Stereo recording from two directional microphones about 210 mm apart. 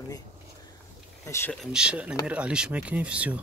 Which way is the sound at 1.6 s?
5° right (ahead or behind).